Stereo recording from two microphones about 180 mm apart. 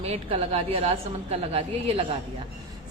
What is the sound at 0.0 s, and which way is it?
A woman's voice, 35° right (ahead or behind).